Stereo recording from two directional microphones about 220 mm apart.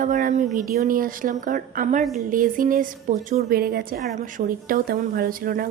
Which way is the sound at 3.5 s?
45° right (ahead or behind).